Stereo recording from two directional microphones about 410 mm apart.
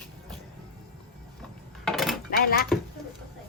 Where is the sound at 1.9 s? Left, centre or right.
Centre.